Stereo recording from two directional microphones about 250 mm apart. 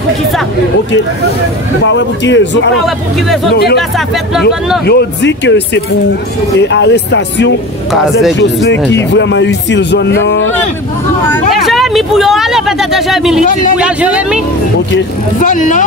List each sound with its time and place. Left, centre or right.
1.9 s speech: left
4.8 s speech: left
6.6 s speech: left
7.9 s speech: centre
8.6 s speech: left
11.2 s speech: centre
15.3 s speech: left